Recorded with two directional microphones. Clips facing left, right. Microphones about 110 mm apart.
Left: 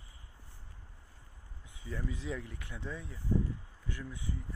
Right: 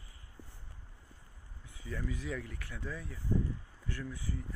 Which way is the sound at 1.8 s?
20° left (ahead or behind).